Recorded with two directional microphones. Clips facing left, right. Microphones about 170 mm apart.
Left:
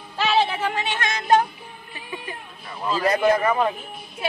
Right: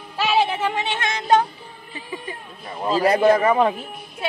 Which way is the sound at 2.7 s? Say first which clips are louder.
Right 3 dB; 35° right (ahead or behind).